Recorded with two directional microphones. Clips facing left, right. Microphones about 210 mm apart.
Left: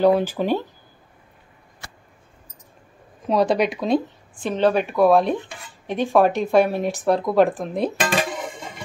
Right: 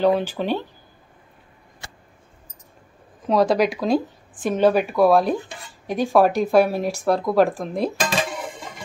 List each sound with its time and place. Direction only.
0.0 s speech: 10° left (ahead or behind)
3.3 s speech: centre (ahead or behind)